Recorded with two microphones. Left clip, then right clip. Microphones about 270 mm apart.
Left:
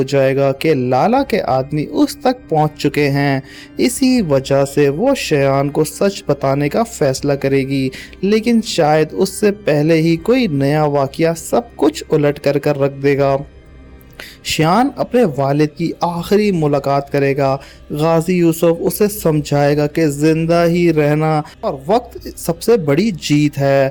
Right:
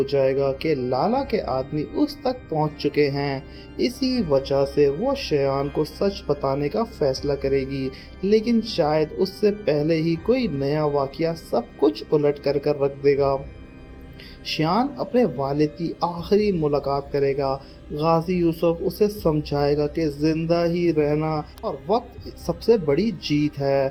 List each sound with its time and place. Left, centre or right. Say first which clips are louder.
0.0 s speech: left 7 dB; left
5.8 s speech: left 8 dB; left
6.2 s speech: left 7 dB; left
14.5 s speech: left 9 dB; left